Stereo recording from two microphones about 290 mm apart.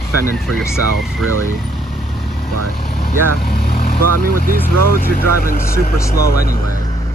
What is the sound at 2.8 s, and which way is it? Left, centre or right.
Speech, left.